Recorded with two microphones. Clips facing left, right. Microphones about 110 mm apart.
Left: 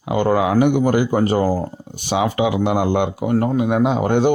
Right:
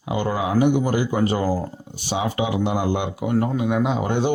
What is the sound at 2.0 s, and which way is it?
Speech, 65° left (ahead or behind).